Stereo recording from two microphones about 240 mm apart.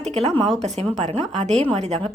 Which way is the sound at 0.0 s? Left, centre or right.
Right.